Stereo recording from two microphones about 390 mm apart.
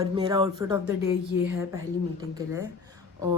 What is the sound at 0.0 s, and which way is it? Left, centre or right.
Speech, centre.